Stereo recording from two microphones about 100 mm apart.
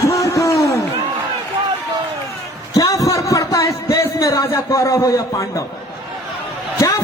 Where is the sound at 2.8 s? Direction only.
35° left (ahead or behind).